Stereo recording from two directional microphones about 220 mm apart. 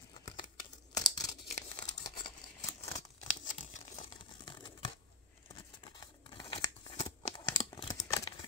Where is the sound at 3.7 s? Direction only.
30° left (ahead or behind).